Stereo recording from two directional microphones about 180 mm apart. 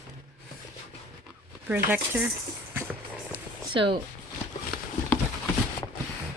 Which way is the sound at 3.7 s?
30° right (ahead or behind).